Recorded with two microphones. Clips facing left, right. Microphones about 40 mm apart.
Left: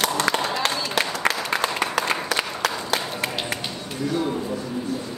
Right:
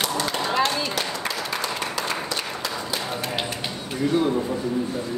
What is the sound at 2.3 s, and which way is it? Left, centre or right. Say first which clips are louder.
Applause: left 4 dB; left.